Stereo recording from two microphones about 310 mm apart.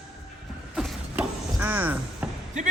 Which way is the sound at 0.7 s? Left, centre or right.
Centre.